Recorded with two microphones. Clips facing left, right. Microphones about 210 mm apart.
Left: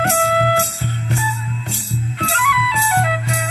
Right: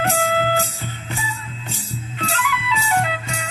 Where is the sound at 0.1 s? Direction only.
70° left (ahead or behind).